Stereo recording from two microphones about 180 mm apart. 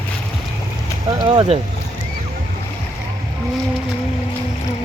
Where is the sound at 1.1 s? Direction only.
25° right (ahead or behind).